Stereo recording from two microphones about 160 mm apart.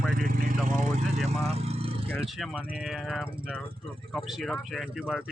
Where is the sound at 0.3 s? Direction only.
55° right (ahead or behind).